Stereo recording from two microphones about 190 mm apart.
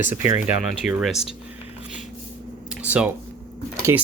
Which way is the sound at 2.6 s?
5° right (ahead or behind).